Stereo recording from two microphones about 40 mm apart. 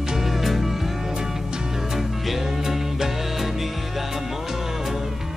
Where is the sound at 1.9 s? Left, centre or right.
Centre.